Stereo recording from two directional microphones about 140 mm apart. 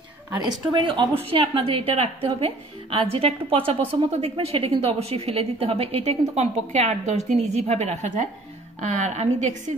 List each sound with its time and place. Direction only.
0.4 s a woman's voice: 30° right (ahead or behind); by 9.5 s 55° right (ahead or behind)